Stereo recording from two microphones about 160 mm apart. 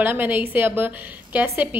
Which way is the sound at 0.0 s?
10° right (ahead or behind).